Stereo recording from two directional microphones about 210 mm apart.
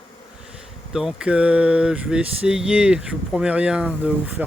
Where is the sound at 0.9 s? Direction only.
5° right (ahead or behind).